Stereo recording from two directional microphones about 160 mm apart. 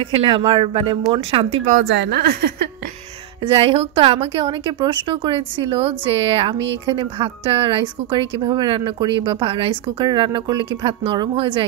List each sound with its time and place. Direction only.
0.0 s a woman's voice: 35° right (ahead or behind)
2.0 s a woman's voice: 90° right
3.4 s a woman's voice: 35° right (ahead or behind)